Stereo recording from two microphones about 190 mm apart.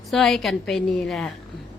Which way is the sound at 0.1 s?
Centre (ahead or behind).